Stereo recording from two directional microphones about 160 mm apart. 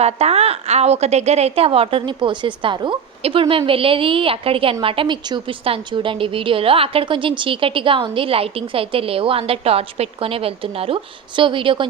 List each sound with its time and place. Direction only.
0.0 s a woman's voice: 40° right (ahead or behind)